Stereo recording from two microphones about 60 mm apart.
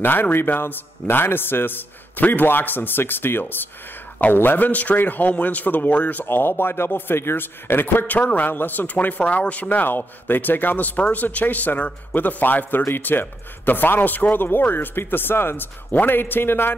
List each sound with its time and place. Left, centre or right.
0.0 s a man's voice: left
6.2 s a man's voice: left